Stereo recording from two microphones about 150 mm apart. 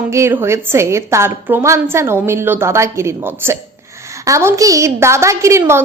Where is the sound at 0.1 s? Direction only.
15° right (ahead or behind).